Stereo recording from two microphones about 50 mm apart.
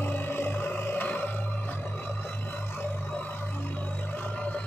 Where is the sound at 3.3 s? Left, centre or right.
Left.